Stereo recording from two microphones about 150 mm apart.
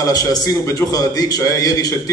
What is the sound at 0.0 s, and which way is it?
A man's voice, 25° left (ahead or behind).